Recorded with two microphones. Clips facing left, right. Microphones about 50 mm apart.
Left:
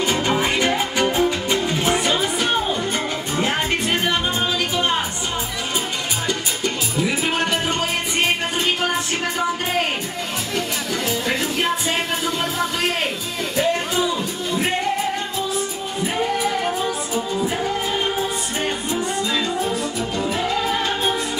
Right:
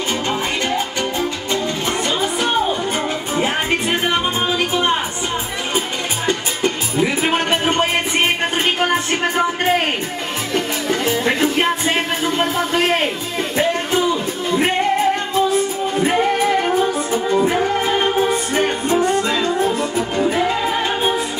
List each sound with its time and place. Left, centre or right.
0.3 s music: centre
3.3 s music: right
6.2 s music: right
10.5 s music: right
15.3 s music: right